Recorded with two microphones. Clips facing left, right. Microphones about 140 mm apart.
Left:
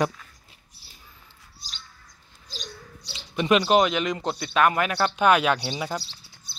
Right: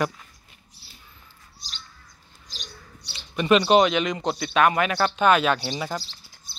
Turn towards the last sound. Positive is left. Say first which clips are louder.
# even
turn(degrees=10)  # may be behind; listen again after turning